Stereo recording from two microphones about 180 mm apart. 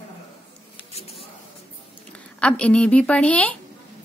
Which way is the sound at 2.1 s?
5° left (ahead or behind).